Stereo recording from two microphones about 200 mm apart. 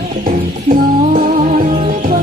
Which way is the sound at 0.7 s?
45° right (ahead or behind).